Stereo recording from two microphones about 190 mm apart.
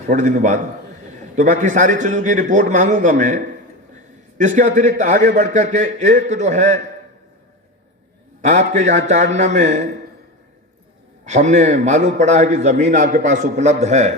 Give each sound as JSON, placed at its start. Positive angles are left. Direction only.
{"t": 0.1, "sound": "a man's voice", "side_deg": -45}
{"t": 8.4, "sound": "a man's voice", "side_deg": -40}
{"t": 11.3, "sound": "a man's voice", "side_deg": -40}